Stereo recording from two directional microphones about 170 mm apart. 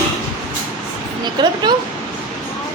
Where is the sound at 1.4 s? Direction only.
25° right (ahead or behind).